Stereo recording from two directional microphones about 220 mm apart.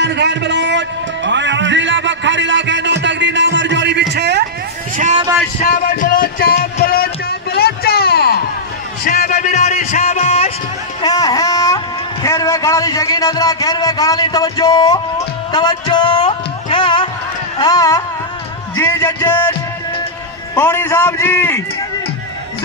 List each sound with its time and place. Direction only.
0.0 s music: 50° right (ahead or behind)
4.1 s a sound: 50° right (ahead or behind)
4.9 s vehicle: 35° right (ahead or behind)
5.6 s music: 40° left (ahead or behind)
11.0 s a sound: 20° left (ahead or behind)
17.6 s carnatic music: 15° left (ahead or behind)
18.8 s a man's voice: 15° left (ahead or behind)
20.5 s a man's voice: 10° left (ahead or behind)